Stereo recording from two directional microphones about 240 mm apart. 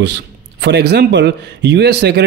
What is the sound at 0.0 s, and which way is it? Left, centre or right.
Speech, right.